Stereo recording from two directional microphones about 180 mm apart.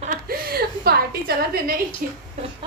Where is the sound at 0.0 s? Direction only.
50° right (ahead or behind).